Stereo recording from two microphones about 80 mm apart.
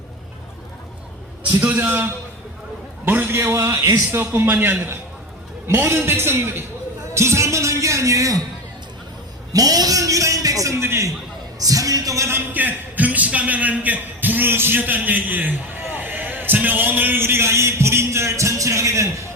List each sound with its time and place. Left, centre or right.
1.8 s a man's voice: right
4.2 s a man's voice: right
7.1 s music: right
9.5 s a man's voice: right
11.6 s a man's voice: right
12.5 s a man's voice: right